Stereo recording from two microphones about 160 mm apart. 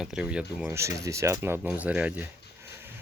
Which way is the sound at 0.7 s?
20° right (ahead or behind).